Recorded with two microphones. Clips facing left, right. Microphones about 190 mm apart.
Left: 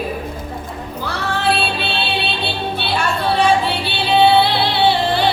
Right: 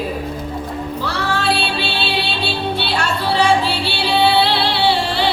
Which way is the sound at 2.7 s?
75° right (ahead or behind).